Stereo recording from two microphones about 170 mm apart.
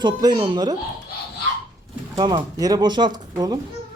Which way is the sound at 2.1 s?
25° right (ahead or behind).